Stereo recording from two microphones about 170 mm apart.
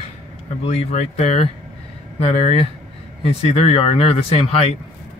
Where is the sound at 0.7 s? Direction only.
35° left (ahead or behind).